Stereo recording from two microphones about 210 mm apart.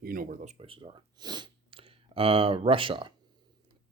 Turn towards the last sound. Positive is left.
turn(degrees=-25)  # may be behind; listen again after turning